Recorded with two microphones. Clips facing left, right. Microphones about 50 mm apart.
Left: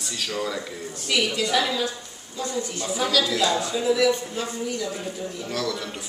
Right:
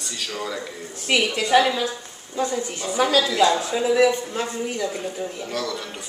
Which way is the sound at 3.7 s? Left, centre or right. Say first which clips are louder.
Right 3 dB; right.